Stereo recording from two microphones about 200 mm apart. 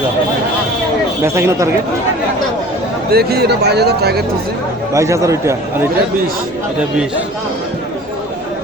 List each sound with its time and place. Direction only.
1.2 s speech: 15° right (ahead or behind)
3.1 s speech: 50° right (ahead or behind)
4.9 s speech: 15° right (ahead or behind)